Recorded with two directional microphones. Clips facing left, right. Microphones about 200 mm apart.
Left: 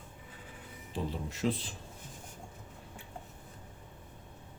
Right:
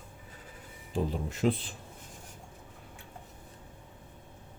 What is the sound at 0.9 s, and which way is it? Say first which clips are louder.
Speech: right 5 dB; 55° right (ahead or behind).